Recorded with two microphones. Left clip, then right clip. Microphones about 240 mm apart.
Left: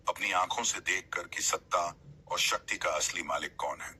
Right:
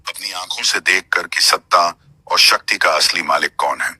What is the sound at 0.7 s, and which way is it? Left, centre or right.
Speech, right.